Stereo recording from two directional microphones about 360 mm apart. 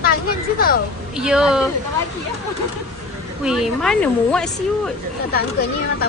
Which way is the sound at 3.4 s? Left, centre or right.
Centre.